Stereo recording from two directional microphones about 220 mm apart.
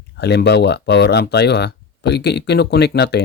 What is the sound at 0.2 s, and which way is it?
Speech, 50° left (ahead or behind).